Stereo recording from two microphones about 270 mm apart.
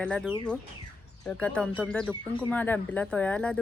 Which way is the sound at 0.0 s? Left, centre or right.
Centre.